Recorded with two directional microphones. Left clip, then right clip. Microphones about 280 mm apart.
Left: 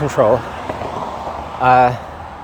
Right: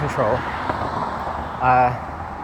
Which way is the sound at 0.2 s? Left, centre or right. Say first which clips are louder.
Left 7 dB; left.